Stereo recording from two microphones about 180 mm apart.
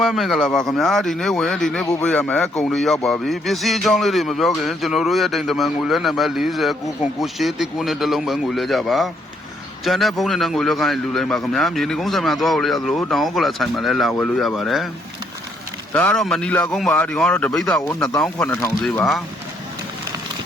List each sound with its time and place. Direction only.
0.0 s speech: centre (ahead or behind)
15.9 s speech: 10° left (ahead or behind)
17.7 s speech: 20° left (ahead or behind)
18.2 s speech: 10° left (ahead or behind)